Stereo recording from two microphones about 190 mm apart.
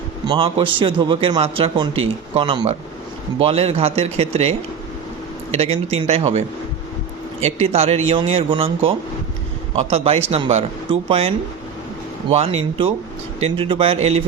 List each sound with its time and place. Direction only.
0.3 s a man's voice: 25° right (ahead or behind)
7.4 s a man's voice: 35° right (ahead or behind)